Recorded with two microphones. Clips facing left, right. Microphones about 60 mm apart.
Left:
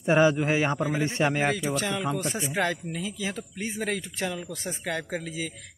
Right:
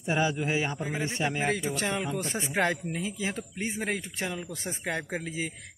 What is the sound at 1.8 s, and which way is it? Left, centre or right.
Speech, right.